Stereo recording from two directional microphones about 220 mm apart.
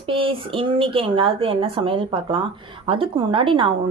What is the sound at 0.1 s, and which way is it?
Speech, 25° right (ahead or behind).